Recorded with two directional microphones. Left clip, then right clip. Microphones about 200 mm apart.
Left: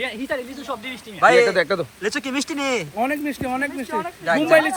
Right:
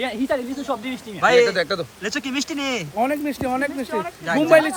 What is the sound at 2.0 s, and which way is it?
A man's voice, 5° right (ahead or behind).